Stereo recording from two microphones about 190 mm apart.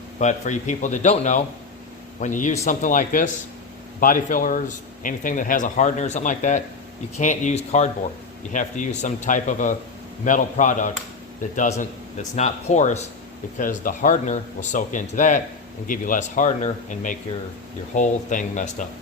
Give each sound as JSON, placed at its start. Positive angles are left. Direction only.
{"t": 0.2, "sound": "speech", "side_deg": 40}